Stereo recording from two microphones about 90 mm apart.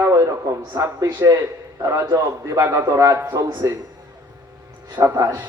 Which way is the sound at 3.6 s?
35° right (ahead or behind).